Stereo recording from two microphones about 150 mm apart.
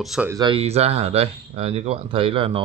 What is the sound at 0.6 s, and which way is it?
Speech, 45° right (ahead or behind).